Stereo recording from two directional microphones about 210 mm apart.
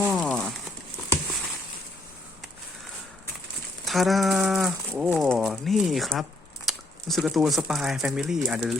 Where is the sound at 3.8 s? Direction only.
Centre (ahead or behind).